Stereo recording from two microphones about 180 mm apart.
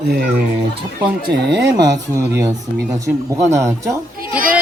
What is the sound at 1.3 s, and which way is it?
Speech, 70° right (ahead or behind).